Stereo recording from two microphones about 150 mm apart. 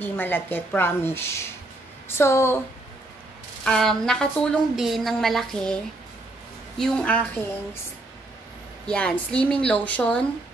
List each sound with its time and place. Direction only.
0.0 s a woman's voice: 15° left (ahead or behind)
3.6 s a woman's voice: 5° left (ahead or behind)
6.8 s a woman's voice: 5° left (ahead or behind)
8.8 s a woman's voice: 5° left (ahead or behind)